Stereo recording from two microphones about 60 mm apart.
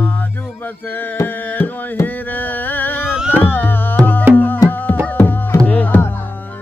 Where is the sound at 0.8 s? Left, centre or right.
Left.